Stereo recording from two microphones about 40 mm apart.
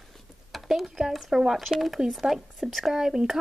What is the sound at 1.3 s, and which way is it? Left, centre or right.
Speech, centre.